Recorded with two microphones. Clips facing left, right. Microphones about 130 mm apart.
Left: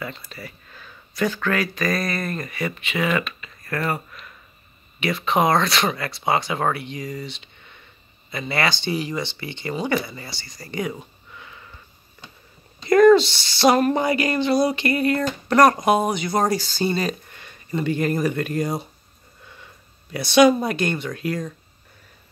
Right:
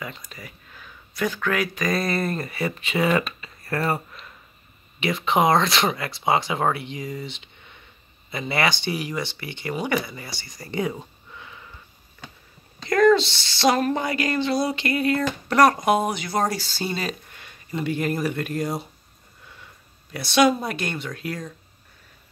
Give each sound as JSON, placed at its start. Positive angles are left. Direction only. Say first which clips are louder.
{"t": 0.0, "sound": "speech", "louder": "left 3 dB", "side_deg": -15}
{"t": 1.9, "sound": "speech", "louder": "right 1 dB", "side_deg": -25}
{"t": 8.8, "sound": "speech", "louder": "left 2 dB", "side_deg": -10}
{"t": 10.4, "sound": "speech", "louder": "right 1 dB", "side_deg": -25}
{"t": 12.9, "sound": "speech", "louder": "left 4 dB", "side_deg": 5}
{"t": 20.1, "sound": "speech", "louder": "left 4 dB", "side_deg": 0}